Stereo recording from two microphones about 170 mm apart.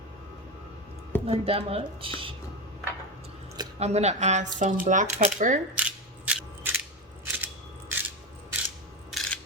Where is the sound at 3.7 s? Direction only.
40° right (ahead or behind).